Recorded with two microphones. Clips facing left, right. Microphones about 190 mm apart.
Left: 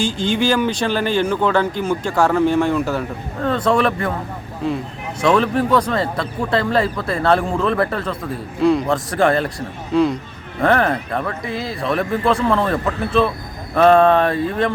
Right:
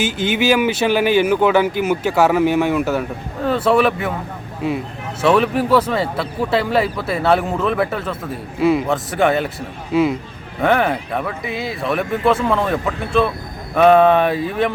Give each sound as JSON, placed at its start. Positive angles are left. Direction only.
{"t": 0.3, "sound": "speech", "side_deg": -5}